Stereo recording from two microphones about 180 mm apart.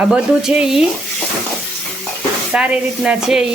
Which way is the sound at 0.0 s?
5° right (ahead or behind).